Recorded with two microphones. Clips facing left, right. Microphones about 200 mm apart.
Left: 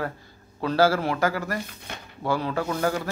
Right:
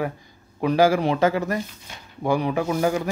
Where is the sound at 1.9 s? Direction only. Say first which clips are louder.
Left 5 dB; 65° left (ahead or behind).